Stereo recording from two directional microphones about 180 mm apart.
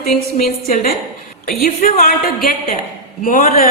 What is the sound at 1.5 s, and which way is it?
Speech, 55° left (ahead or behind).